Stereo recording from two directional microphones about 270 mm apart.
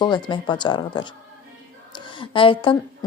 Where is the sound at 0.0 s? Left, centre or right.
Centre.